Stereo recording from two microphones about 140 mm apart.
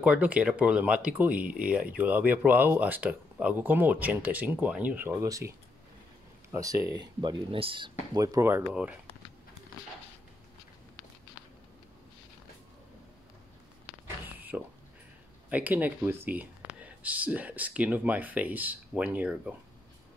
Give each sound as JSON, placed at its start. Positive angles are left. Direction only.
{"t": 0.0, "sound": "speech", "side_deg": -10}
{"t": 6.5, "sound": "speech", "side_deg": -25}
{"t": 8.1, "sound": "speech", "side_deg": -25}
{"t": 14.2, "sound": "a sound", "side_deg": -15}
{"t": 15.5, "sound": "speech", "side_deg": -10}